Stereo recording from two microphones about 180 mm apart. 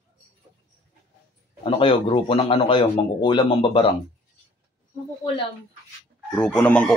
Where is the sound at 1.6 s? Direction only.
30° left (ahead or behind).